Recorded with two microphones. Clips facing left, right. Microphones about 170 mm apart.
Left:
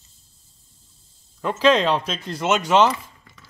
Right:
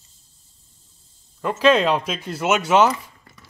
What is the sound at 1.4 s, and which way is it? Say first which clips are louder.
Speech: right 1 dB; 5° right (ahead or behind).